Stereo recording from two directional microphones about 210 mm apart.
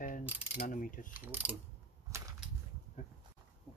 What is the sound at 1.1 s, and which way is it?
Mechanisms, 10° right (ahead or behind).